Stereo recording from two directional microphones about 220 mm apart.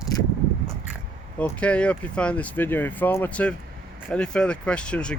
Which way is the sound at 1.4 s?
5° left (ahead or behind).